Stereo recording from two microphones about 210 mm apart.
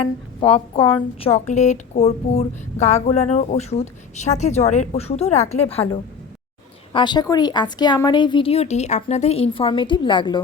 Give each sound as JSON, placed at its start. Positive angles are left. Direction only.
{"t": 0.0, "sound": "a woman's voice", "side_deg": 25}